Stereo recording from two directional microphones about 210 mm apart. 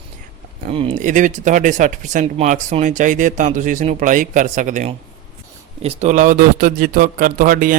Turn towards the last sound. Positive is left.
turn(degrees=-40)  # may be behind; listen again after turning